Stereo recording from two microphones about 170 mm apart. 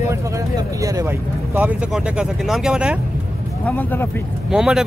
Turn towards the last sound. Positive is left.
turn(degrees=-5)  # may be behind; listen again after turning